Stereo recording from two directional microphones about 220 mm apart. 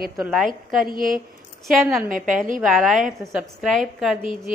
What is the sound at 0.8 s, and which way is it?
Speech, 40° right (ahead or behind).